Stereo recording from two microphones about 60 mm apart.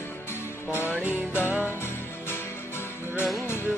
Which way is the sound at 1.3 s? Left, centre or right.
Left.